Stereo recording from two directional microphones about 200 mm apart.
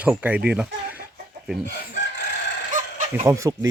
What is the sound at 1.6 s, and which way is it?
Chicken, 60° left (ahead or behind).